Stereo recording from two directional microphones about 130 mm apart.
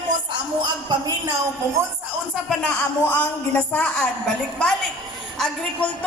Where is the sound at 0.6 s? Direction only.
35° right (ahead or behind).